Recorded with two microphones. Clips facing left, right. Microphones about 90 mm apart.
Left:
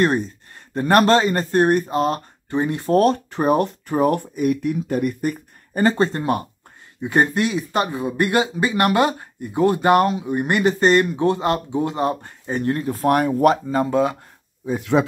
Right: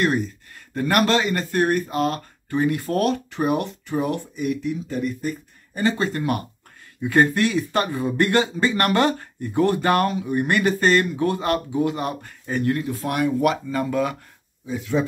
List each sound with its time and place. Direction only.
0.0 s speech: 35° left (ahead or behind)
14.8 s speech: 75° left (ahead or behind)